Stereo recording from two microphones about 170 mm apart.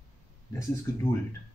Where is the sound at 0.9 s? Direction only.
15° left (ahead or behind).